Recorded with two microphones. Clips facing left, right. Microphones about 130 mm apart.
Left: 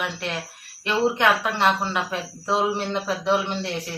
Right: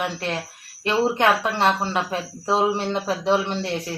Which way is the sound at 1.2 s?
30° right (ahead or behind).